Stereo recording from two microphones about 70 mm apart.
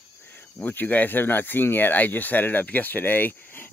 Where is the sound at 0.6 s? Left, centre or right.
Left.